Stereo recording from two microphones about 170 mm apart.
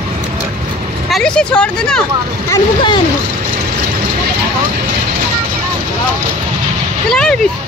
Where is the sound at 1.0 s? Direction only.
5° left (ahead or behind).